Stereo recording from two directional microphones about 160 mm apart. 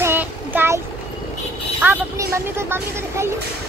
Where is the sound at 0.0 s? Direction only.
10° right (ahead or behind).